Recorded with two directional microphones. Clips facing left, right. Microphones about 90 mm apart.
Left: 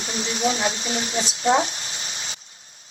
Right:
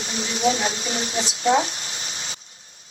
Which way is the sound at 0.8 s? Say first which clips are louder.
Left 1 dB; 35° right (ahead or behind).